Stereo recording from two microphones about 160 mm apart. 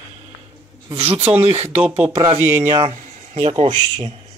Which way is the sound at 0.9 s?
40° right (ahead or behind).